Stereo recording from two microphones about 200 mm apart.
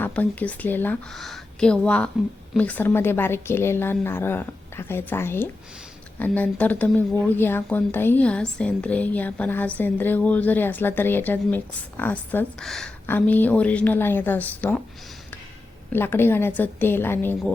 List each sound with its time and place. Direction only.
0.0 s a woman's voice: 10° left (ahead or behind)
15.9 s a woman's voice: 10° left (ahead or behind)